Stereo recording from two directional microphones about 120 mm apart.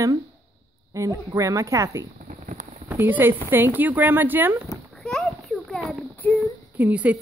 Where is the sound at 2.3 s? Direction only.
90° right.